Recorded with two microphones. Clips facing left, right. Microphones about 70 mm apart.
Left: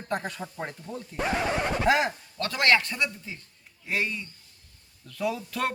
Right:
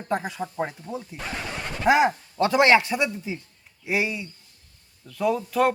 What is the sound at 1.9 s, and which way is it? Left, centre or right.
A man's voice, centre.